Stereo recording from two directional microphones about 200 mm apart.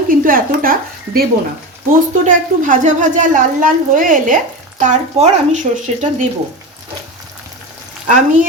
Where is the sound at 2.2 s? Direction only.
40° right (ahead or behind).